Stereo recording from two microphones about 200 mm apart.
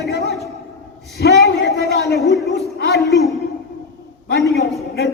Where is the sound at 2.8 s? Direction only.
55° left (ahead or behind).